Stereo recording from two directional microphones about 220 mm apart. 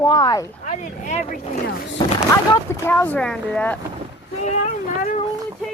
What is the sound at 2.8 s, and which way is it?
Speech, 10° left (ahead or behind).